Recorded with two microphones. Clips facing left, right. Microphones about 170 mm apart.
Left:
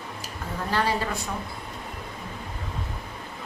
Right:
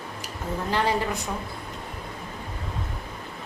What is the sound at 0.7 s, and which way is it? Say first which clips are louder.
Speech: right 1 dB; 20° right (ahead or behind).